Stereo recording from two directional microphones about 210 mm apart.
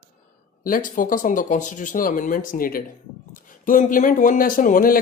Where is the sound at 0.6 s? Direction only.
40° left (ahead or behind).